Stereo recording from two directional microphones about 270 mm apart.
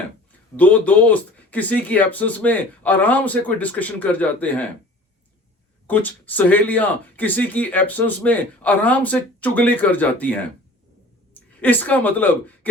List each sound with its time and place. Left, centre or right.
0.5 s speech: centre
5.9 s speech: centre
11.6 s speech: centre